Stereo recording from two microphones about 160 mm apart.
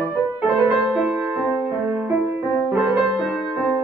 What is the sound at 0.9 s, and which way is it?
Music, centre (ahead or behind).